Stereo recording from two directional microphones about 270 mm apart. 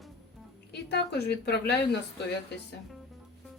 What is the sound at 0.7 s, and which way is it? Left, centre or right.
A woman's voice, left.